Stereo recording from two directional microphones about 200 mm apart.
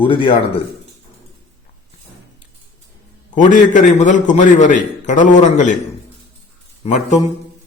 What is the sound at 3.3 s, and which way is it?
A man's voice, 40° left (ahead or behind).